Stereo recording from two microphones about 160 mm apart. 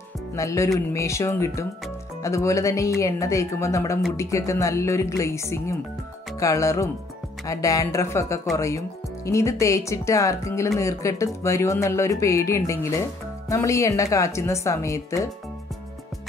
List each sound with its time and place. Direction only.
0.4 s speech: 20° left (ahead or behind)